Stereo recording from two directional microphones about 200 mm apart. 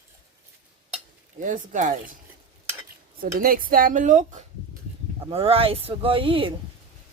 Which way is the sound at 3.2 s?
45° right (ahead or behind).